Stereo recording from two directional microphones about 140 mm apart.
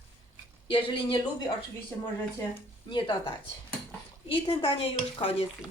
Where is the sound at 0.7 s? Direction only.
40° left (ahead or behind).